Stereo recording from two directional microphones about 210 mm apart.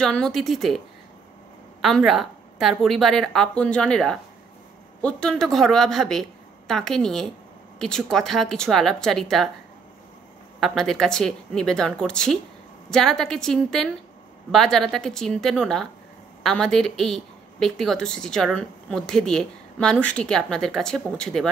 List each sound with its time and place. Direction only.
0.0 s a woman's voice: 5° left (ahead or behind)
10.6 s a woman's voice: centre (ahead or behind)